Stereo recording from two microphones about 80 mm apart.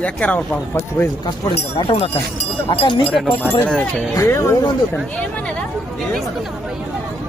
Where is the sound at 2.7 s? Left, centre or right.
Left.